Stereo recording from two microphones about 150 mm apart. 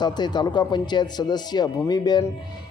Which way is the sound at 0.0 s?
30° left (ahead or behind).